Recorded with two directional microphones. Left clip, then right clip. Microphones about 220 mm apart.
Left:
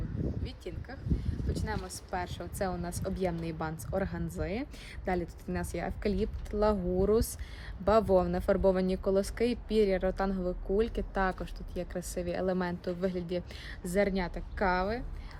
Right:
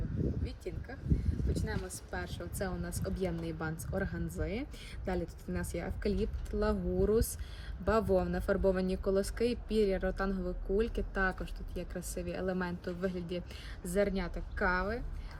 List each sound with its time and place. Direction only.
0.4 s a sound: centre (ahead or behind)
1.5 s speech: 5° left (ahead or behind)
2.4 s a woman's voice: 40° left (ahead or behind)